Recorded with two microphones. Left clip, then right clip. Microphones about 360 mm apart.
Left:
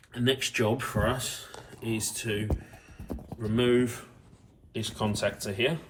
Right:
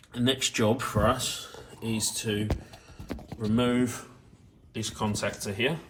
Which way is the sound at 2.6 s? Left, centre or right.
Centre.